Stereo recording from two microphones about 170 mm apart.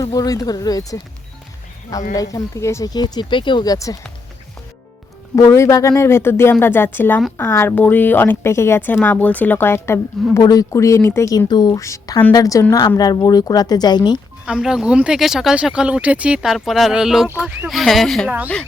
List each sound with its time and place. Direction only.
0.0 s speech: 20° left (ahead or behind)
2.1 s speech: 20° left (ahead or behind)
5.4 s a woman's voice: 15° left (ahead or behind)
14.4 s speech: 5° right (ahead or behind)